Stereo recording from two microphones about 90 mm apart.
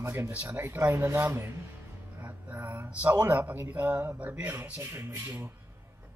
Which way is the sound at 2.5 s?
20° right (ahead or behind).